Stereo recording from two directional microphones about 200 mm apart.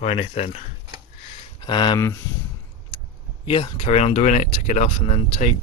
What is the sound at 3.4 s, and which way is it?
Speech, 25° left (ahead or behind).